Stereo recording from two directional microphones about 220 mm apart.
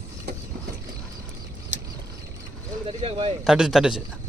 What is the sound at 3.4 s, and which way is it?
Speech, centre (ahead or behind).